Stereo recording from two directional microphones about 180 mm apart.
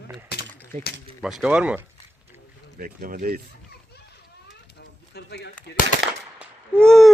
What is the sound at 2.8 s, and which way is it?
Speech, 50° right (ahead or behind).